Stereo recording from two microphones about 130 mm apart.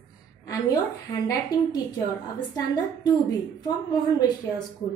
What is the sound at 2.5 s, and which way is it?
Speech, 30° left (ahead or behind).